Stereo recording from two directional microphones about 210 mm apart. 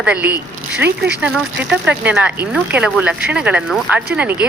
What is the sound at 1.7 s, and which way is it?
Speech, 5° right (ahead or behind).